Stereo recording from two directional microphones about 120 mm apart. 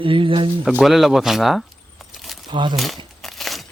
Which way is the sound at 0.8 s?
Centre (ahead or behind).